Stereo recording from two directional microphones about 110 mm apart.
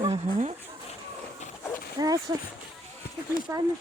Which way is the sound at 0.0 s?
80° right.